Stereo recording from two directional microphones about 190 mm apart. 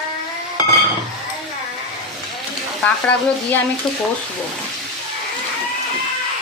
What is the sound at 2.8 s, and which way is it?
A woman's voice, 10° left (ahead or behind).